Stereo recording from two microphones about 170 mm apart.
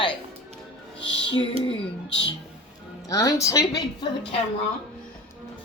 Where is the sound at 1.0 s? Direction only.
90° left.